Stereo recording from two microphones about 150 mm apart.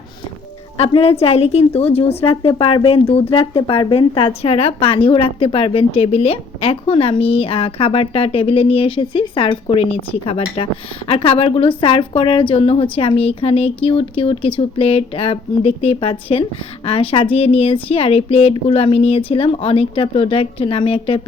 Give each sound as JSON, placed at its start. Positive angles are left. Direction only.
{"t": 0.8, "sound": "a woman's voice", "side_deg": 45}